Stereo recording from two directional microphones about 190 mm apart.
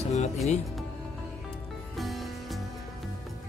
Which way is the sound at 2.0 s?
Centre (ahead or behind).